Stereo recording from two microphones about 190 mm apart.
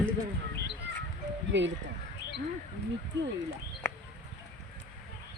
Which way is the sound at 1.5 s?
70° right (ahead or behind).